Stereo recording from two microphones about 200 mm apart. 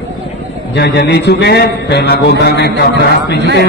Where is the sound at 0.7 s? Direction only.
55° left (ahead or behind).